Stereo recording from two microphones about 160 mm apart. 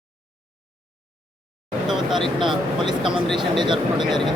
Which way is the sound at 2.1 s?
30° right (ahead or behind).